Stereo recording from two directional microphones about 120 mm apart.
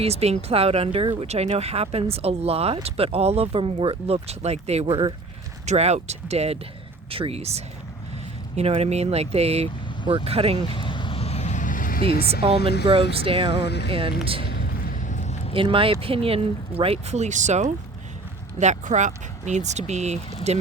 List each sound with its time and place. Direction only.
0.0 s speech: 60° right (ahead or behind)
10.8 s vehicle: 45° left (ahead or behind); by 11.8 s 90° left
12.3 s speech: 50° right (ahead or behind)
15.0 s a sound: 80° left
15.5 s speech: 45° right (ahead or behind); by 20.6 s 65° right (ahead or behind)